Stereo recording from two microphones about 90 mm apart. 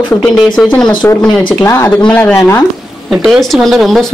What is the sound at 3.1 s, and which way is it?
Speech, 5° right (ahead or behind).